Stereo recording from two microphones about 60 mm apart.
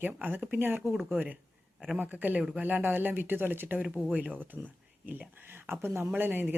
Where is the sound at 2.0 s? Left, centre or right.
Right.